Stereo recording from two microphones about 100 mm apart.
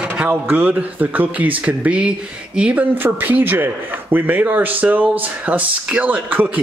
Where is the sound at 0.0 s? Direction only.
15° right (ahead or behind).